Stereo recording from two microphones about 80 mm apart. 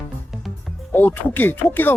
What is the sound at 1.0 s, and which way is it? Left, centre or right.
Speech, left.